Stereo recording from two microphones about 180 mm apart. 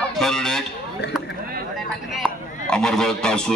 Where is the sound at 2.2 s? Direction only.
5° left (ahead or behind).